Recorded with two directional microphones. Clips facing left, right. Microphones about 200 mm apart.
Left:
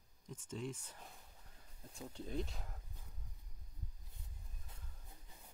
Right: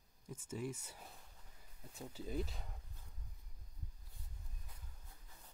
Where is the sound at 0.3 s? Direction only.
10° right (ahead or behind).